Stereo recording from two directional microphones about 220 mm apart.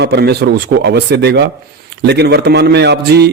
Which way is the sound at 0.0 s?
50° right (ahead or behind).